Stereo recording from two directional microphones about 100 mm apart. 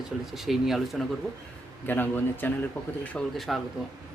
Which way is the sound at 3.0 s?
5° left (ahead or behind).